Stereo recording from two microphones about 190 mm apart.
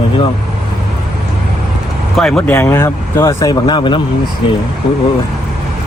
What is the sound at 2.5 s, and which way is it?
Speech, 15° left (ahead or behind).